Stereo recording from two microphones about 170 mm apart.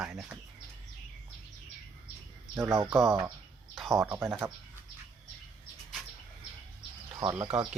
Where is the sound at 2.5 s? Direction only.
15° right (ahead or behind).